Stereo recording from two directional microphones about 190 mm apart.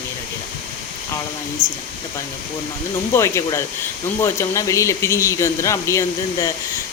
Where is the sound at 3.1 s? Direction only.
15° left (ahead or behind).